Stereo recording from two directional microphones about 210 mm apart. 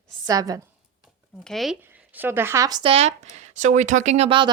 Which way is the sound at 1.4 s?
Centre (ahead or behind).